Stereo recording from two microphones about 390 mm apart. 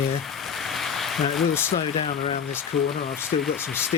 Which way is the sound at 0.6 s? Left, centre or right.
Centre.